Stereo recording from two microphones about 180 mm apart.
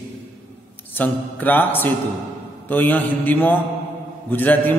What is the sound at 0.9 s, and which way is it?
A man's voice, 10° left (ahead or behind).